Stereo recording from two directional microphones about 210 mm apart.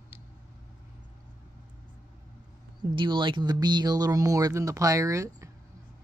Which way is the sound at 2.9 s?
20° right (ahead or behind).